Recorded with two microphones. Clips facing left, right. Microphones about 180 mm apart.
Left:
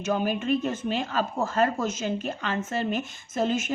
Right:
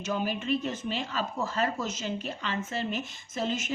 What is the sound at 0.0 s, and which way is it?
Speech, 50° left (ahead or behind).